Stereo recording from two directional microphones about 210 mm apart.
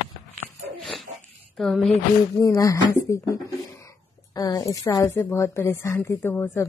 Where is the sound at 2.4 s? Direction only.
15° left (ahead or behind).